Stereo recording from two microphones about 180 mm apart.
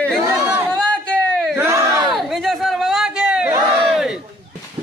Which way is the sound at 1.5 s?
15° right (ahead or behind).